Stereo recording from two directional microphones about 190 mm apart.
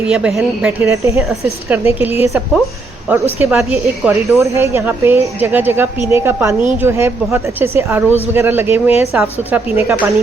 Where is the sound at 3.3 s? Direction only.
10° right (ahead or behind).